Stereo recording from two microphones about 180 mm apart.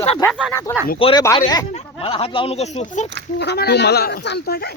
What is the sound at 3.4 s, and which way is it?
Speech, 65° left (ahead or behind).